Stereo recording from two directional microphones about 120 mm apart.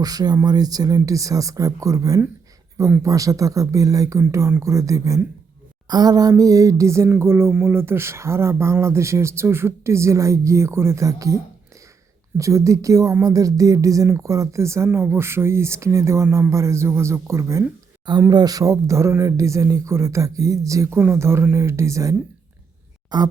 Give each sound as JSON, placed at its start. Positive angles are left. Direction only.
{"t": 0.0, "sound": "speech", "side_deg": -30}
{"t": 12.4, "sound": "speech", "side_deg": -25}
{"t": 18.3, "sound": "speech", "side_deg": -35}
{"t": 23.1, "sound": "speech", "side_deg": -35}